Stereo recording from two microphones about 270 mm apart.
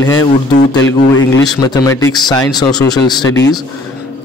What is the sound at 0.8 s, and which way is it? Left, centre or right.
Speech, left.